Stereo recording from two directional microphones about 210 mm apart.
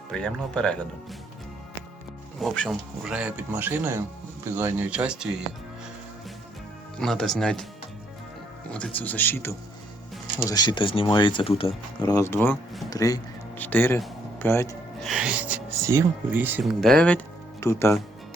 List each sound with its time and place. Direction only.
0.1 s speech: 5° left (ahead or behind)
2.4 s speech: centre (ahead or behind)
7.0 s speech: centre (ahead or behind)
8.7 s speech: 5° left (ahead or behind)
15.0 s speech: 5° right (ahead or behind)
16.8 s speech: 5° left (ahead or behind)